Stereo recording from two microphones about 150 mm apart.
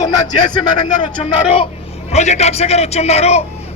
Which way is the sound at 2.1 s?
50° left (ahead or behind).